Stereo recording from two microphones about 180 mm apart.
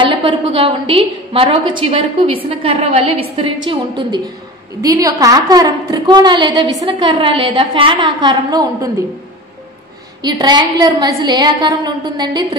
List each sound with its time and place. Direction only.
0.0 s a woman's voice: 25° right (ahead or behind)
10.2 s a woman's voice: 25° right (ahead or behind)